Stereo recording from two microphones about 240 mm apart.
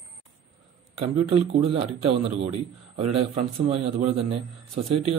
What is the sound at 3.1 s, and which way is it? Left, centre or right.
A man's voice, right.